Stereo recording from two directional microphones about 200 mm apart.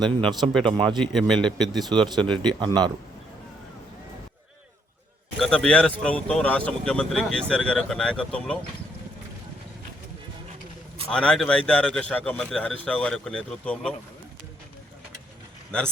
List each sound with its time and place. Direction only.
0.3 s speech: 20° right (ahead or behind)
1.0 s speech: centre (ahead or behind)
1.8 s speech: 20° right (ahead or behind)
5.4 s speech: 5° left (ahead or behind)
11.1 s speech: 5° left (ahead or behind)